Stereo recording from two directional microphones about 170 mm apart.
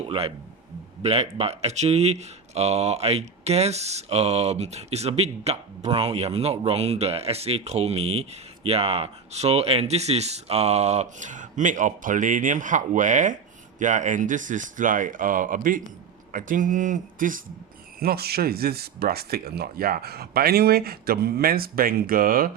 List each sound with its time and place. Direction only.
0.1 s speech: 30° right (ahead or behind); by 17.4 s 55° right (ahead or behind)
18.0 s speech: 65° right (ahead or behind)